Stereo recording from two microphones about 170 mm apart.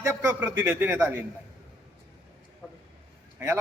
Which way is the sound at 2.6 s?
5° left (ahead or behind).